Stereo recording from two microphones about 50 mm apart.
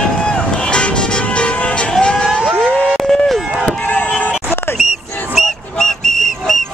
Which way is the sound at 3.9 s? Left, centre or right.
Left.